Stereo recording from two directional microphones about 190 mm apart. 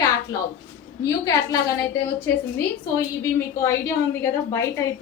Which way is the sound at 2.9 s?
15° left (ahead or behind).